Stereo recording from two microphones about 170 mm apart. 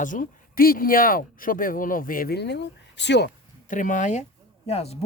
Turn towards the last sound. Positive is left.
turn(degrees=40)  # may be behind; listen again after turning